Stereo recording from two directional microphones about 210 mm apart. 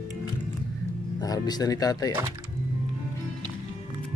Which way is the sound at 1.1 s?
20° left (ahead or behind).